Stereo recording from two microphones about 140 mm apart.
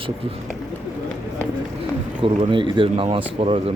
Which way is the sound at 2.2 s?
40° right (ahead or behind).